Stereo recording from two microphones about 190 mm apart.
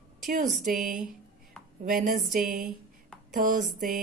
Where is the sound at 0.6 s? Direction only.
45° right (ahead or behind).